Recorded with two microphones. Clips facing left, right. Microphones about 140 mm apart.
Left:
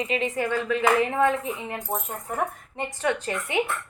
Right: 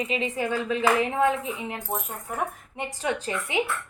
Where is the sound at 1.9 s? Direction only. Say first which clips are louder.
Left 1 dB; 20° left (ahead or behind).